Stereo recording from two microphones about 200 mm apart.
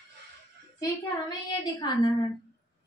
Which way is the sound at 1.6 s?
20° left (ahead or behind).